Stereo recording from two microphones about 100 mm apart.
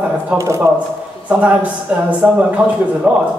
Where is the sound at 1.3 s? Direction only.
15° right (ahead or behind).